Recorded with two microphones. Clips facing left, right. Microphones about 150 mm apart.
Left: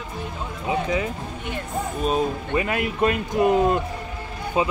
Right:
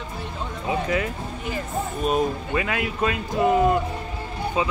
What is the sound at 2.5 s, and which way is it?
A man's voice, 25° left (ahead or behind).